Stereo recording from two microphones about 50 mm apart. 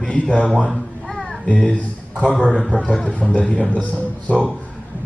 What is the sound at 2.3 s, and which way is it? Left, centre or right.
Speech, left.